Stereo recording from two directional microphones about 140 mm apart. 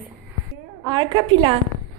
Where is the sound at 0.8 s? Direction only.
35° right (ahead or behind).